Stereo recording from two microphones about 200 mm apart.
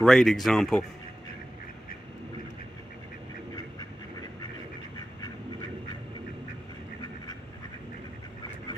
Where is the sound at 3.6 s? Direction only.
20° left (ahead or behind).